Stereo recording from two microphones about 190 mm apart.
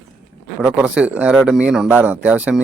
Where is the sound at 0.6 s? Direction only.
5° right (ahead or behind).